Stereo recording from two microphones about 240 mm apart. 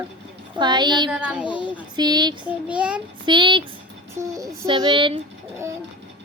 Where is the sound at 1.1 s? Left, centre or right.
Centre.